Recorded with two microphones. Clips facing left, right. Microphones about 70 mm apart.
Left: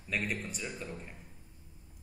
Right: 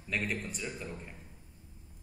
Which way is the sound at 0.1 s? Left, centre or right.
Centre.